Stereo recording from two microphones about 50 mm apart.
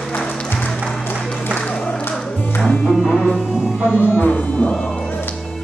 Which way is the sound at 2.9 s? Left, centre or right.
Centre.